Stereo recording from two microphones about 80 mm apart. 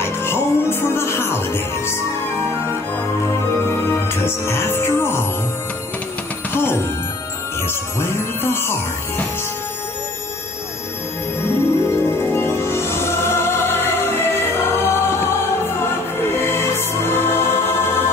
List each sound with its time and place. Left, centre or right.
0.0 s music: left
4.1 s music: left
6.5 s music: left
11.4 s music: left
16.3 s music: left